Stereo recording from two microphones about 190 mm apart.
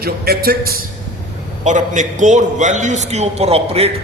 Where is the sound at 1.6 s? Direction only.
40° right (ahead or behind).